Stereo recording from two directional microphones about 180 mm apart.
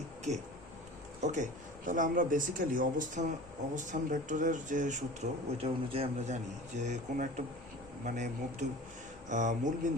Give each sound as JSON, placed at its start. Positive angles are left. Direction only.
{"t": 1.2, "sound": "speech", "side_deg": -40}
{"t": 9.3, "sound": "speech", "side_deg": -45}